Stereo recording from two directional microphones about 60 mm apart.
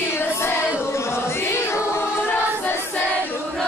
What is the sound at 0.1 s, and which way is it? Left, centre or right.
Female singing, left.